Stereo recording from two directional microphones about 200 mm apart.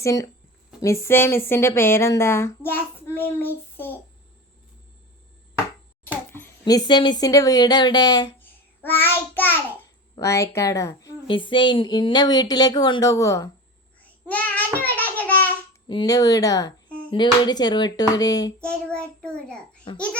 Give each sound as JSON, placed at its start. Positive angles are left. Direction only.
{"t": 0.0, "sound": "speech", "side_deg": 15}
{"t": 6.3, "sound": "speech", "side_deg": 15}
{"t": 8.4, "sound": "child singing", "side_deg": 10}
{"t": 10.2, "sound": "speech", "side_deg": 15}
{"t": 14.0, "sound": "child singing", "side_deg": 5}
{"t": 15.2, "sound": "babbling", "side_deg": 10}
{"t": 15.9, "sound": "speech", "side_deg": 20}
{"t": 18.6, "sound": "a child's voice", "side_deg": 5}
{"t": 19.9, "sound": "speech", "side_deg": 25}